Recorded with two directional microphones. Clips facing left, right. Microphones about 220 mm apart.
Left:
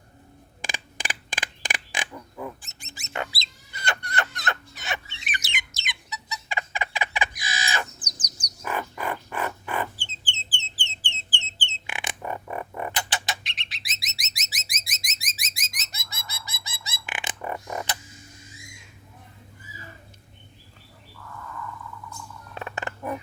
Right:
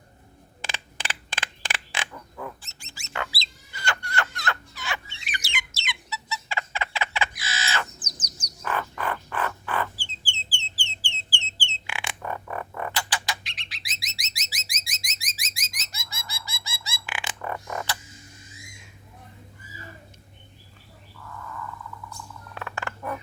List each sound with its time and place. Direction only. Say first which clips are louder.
0.6 s a sound: left 1 dB; 15° left (ahead or behind)
5.2 s bird: even; 20° left (ahead or behind)
11.6 s music: even; 20° left (ahead or behind)
14.8 s alarm: left 1 dB; 20° left (ahead or behind)
15.3 s bird: left 1 dB; 20° left (ahead or behind)
22.5 s a sound: left 1 dB; 20° left (ahead or behind)